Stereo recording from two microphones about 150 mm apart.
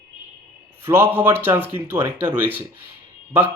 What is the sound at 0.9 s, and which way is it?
A man's voice, 15° right (ahead or behind).